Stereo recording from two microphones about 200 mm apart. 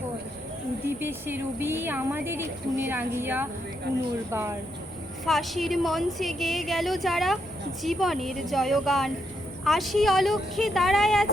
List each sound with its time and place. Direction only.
0.9 s speech: 10° right (ahead or behind)
5.2 s a woman's voice: centre (ahead or behind)